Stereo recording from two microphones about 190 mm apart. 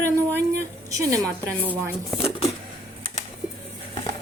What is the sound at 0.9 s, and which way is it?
A woman's voice, 20° right (ahead or behind).